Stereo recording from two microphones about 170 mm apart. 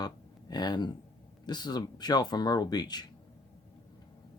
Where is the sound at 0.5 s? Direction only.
25° left (ahead or behind).